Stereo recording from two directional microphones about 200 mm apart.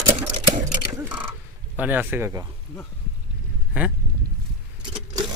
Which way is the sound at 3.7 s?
10° right (ahead or behind).